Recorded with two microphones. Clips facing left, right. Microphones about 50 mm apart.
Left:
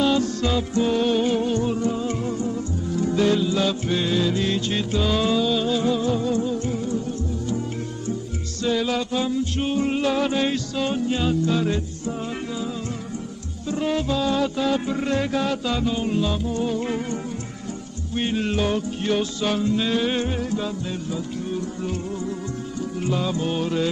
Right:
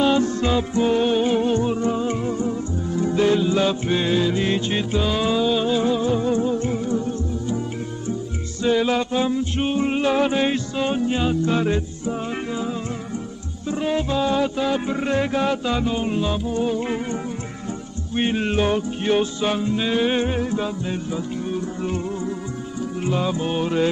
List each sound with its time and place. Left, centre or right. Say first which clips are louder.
0.0 s music: right 2 dB; right
5.0 s music: even; centre; by 7.6 s right
8.6 s music: right 4 dB; right
13.7 s music: right 1 dB; centre